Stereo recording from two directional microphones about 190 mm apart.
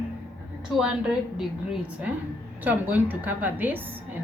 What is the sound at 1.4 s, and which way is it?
A woman's voice, centre (ahead or behind).